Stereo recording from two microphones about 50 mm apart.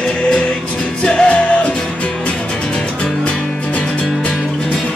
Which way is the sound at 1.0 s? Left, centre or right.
Left.